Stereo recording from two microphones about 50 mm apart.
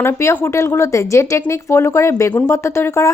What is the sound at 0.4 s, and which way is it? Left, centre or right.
A woman's voice, left.